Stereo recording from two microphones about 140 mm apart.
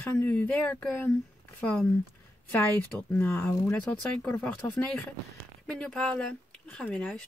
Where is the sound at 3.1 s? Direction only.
10° left (ahead or behind).